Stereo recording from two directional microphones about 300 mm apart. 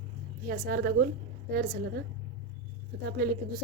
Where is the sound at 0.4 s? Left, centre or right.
Right.